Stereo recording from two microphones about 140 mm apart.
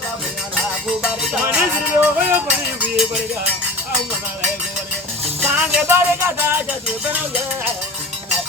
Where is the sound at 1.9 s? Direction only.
15° right (ahead or behind).